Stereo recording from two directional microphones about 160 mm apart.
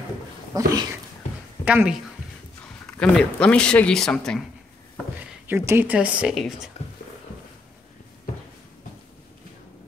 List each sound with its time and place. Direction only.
0.5 s speech: 25° right (ahead or behind)
1.6 s speech: 10° right (ahead or behind)
2.9 s speech: 5° left (ahead or behind)
5.5 s speech: 15° right (ahead or behind)